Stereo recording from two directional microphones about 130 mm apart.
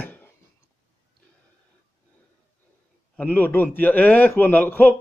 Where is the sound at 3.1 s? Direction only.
10° left (ahead or behind).